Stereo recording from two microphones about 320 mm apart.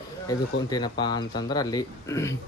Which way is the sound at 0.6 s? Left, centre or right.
Centre.